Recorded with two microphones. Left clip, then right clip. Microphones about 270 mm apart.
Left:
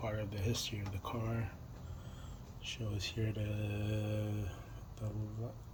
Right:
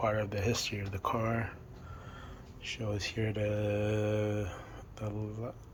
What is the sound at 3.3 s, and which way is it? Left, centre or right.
Mantra, right.